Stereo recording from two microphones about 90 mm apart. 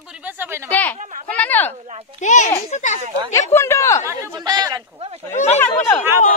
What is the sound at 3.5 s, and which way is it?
Speech, 30° left (ahead or behind).